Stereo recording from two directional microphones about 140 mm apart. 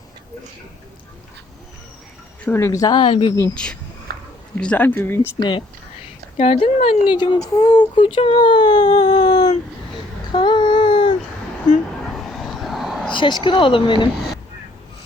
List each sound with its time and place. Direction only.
2.4 s speech: 15° left (ahead or behind); by 3.3 s 40° left (ahead or behind)
3.5 s speech: 5° left (ahead or behind)
4.1 s a sound: 90° right
4.5 s speech: 10° left (ahead or behind)
5.4 s speech: 35° left (ahead or behind)
6.3 s speech: 45° left (ahead or behind)
10.3 s a sound: 35° left (ahead or behind)
12.3 s vehicle: centre (ahead or behind)
13.1 s speech: 35° left (ahead or behind)